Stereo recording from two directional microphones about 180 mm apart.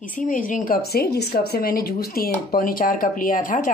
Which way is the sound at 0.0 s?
50° left (ahead or behind).